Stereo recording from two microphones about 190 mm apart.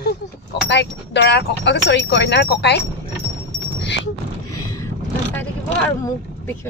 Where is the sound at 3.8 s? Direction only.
65° left (ahead or behind).